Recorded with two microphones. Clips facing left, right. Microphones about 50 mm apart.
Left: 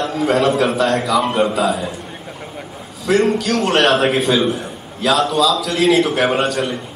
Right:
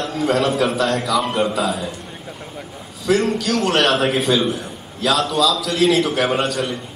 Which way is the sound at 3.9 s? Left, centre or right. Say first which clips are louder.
Left 2 dB; centre.